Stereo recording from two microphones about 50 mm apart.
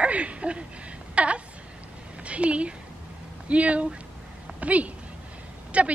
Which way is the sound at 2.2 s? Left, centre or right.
Right.